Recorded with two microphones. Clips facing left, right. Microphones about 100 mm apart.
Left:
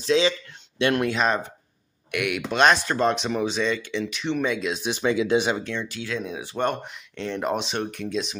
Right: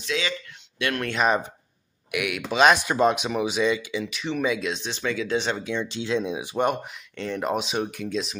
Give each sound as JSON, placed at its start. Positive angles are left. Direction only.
{"t": 0.0, "sound": "speech", "side_deg": 30}
{"t": 2.0, "sound": "speech", "side_deg": 0}
{"t": 5.6, "sound": "speech", "side_deg": -10}
{"t": 5.9, "sound": "speech", "side_deg": -25}